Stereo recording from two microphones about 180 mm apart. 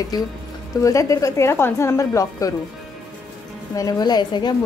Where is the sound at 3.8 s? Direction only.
20° left (ahead or behind).